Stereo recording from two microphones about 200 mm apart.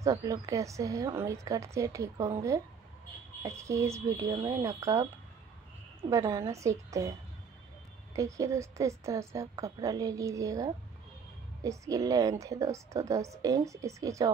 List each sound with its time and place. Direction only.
0.0 s a woman's voice: 15° right (ahead or behind)
3.4 s a woman's voice: 15° right (ahead or behind)
6.0 s a woman's voice: 15° right (ahead or behind)
8.2 s a woman's voice: 15° right (ahead or behind)